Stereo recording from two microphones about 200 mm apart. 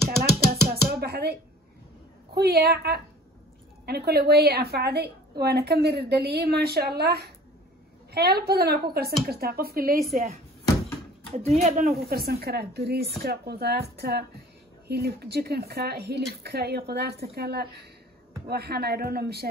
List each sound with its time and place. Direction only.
0.2 s a sound: 50° right (ahead or behind)
2.3 s a woman's voice: 50° right (ahead or behind)
11.3 s speech: 35° right (ahead or behind)
12.1 s a woman's voice: 50° right (ahead or behind)